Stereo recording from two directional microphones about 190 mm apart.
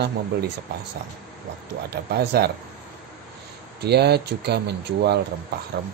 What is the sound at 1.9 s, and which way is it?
Speech, 55° right (ahead or behind).